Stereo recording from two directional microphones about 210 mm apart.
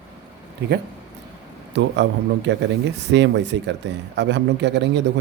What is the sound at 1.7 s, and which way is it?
A man's voice, 55° right (ahead or behind).